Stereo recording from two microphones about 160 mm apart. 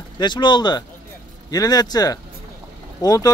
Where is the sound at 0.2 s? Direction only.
30° left (ahead or behind).